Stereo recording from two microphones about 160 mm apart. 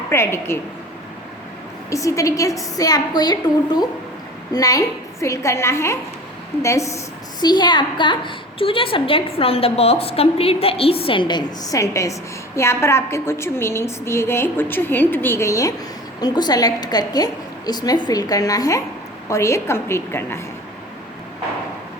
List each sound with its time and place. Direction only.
0.1 s a woman's voice: 15° left (ahead or behind)
1.9 s a woman's voice: 20° left (ahead or behind)